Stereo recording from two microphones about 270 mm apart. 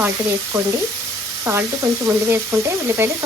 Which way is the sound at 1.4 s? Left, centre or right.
Centre.